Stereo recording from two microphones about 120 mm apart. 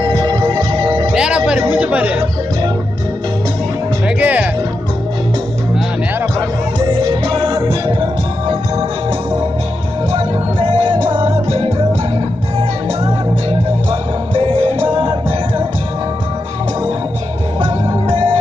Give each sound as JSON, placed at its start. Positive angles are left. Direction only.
{"t": 0.0, "sound": "music", "side_deg": -40}
{"t": 1.1, "sound": "music", "side_deg": -5}
{"t": 4.2, "sound": "music", "side_deg": -10}
{"t": 6.8, "sound": "music", "side_deg": -40}
{"t": 10.1, "sound": "music", "side_deg": -50}
{"t": 14.3, "sound": "music", "side_deg": -45}